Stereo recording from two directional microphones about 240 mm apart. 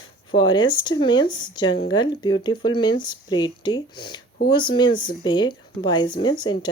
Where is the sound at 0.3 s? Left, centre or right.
Centre.